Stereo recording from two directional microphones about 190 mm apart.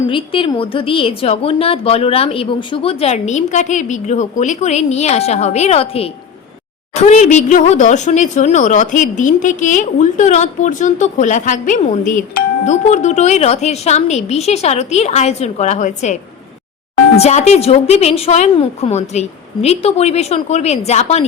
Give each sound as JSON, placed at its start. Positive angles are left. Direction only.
{"t": 0.1, "sound": "speech", "side_deg": 25}
{"t": 17.2, "sound": "speech", "side_deg": 35}